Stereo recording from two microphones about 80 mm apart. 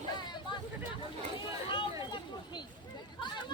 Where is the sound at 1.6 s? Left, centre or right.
Left.